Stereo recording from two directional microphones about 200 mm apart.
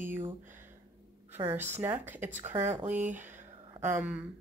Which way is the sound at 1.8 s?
10° right (ahead or behind).